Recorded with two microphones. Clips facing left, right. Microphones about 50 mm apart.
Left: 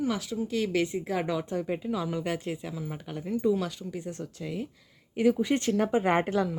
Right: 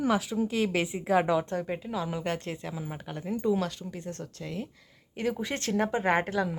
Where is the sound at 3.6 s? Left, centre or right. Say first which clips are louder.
Even; centre.